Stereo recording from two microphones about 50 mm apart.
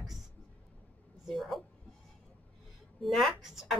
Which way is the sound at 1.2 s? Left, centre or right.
Centre.